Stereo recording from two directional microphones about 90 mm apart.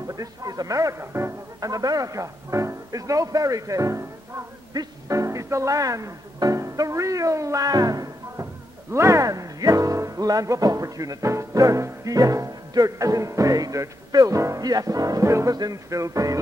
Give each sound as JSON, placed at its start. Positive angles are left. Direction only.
{"t": 0.0, "sound": "music", "side_deg": -40}
{"t": 1.6, "sound": "music", "side_deg": -45}
{"t": 4.7, "sound": "speech", "side_deg": -40}
{"t": 8.9, "sound": "music", "side_deg": -35}